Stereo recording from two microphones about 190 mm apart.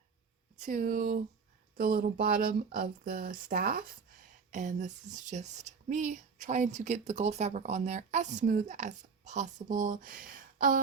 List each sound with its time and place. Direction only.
0.6 s speech: 45° right (ahead or behind)